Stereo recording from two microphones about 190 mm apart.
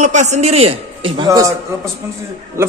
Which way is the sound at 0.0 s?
40° right (ahead or behind).